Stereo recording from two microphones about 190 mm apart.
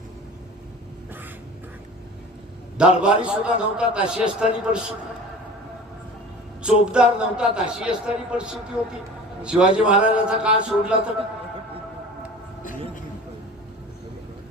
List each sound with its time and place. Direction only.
2.7 s a man's voice: 5° right (ahead or behind)
6.6 s a man's voice: 5° right (ahead or behind)